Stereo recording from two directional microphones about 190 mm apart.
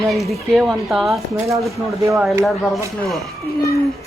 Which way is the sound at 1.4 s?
15° right (ahead or behind).